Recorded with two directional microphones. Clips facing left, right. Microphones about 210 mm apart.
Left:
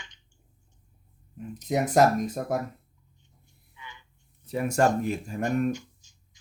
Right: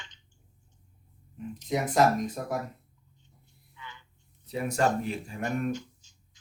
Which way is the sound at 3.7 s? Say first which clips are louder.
Even; 15° left (ahead or behind).